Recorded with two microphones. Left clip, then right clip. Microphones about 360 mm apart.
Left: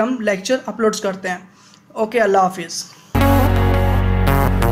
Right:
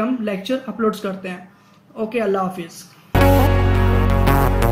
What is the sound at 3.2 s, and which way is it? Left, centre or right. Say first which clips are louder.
Music: even; centre.